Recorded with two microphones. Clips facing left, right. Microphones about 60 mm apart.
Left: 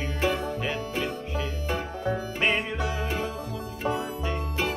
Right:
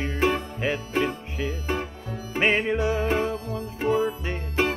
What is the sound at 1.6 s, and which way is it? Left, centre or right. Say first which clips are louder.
Music: left 1 dB; right.